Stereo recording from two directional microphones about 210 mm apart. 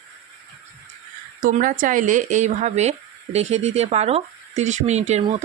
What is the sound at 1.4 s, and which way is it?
Speech, 40° right (ahead or behind).